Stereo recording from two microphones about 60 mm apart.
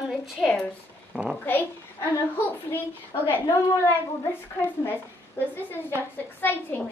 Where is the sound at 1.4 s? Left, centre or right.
Left.